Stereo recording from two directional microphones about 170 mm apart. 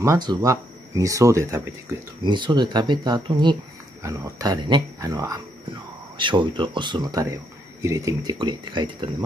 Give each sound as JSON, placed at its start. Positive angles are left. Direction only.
{"t": 0.0, "sound": "speech", "side_deg": -20}
{"t": 2.2, "sound": "speech", "side_deg": -25}